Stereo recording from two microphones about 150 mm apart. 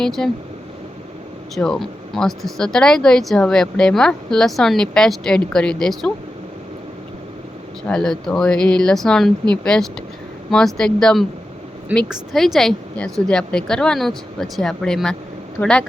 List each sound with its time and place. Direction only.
0.0 s speech: 5° left (ahead or behind)
1.5 s speech: 5° left (ahead or behind)
7.9 s speech: 5° left (ahead or behind)
15.6 s a woman's voice: 15° left (ahead or behind)